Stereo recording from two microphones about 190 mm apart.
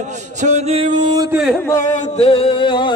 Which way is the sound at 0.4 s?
35° right (ahead or behind).